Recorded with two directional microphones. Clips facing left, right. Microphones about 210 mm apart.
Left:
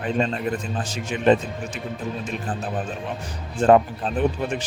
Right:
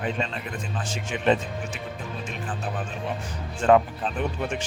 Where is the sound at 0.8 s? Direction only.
40° left (ahead or behind).